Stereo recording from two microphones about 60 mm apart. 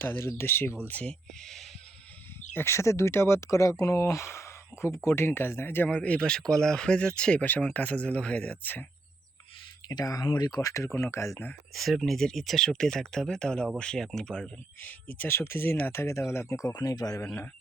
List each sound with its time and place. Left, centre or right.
0.0 s speech: left
1.0 s speech: centre
2.5 s speech: left
5.9 s speech: left
7.4 s speech: left
10.0 s speech: left
10.8 s speech: left
11.7 s speech: centre
14.8 s speech: left
15.3 s speech: left
15.9 s speech: left
16.6 s speech: left